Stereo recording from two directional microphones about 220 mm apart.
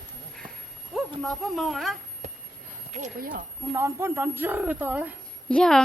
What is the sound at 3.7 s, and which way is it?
Speech, 10° right (ahead or behind).